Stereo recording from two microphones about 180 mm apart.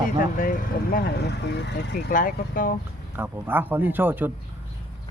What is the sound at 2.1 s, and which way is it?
Speech, 50° left (ahead or behind).